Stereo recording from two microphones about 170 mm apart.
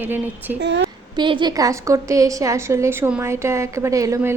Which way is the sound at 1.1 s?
25° right (ahead or behind).